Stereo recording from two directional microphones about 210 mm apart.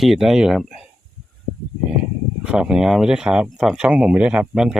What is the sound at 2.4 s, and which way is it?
Speech, 5° right (ahead or behind).